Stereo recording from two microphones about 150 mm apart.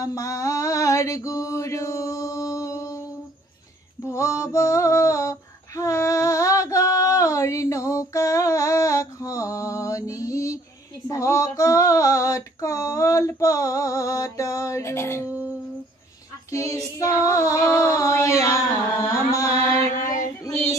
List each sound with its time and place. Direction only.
0.0 s mantra: 20° left (ahead or behind)
4.1 s female singing: 20° left (ahead or behind)
16.5 s female singing: 20° left (ahead or behind)
19.0 s carnatic music: 20° left (ahead or behind)
20.0 s child singing: 60° left (ahead or behind)